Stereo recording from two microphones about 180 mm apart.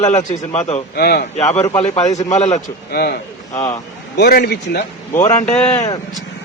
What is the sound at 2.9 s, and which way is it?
A man's voice, 60° left (ahead or behind).